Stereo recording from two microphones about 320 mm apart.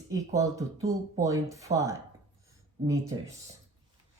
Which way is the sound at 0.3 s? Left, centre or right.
Centre.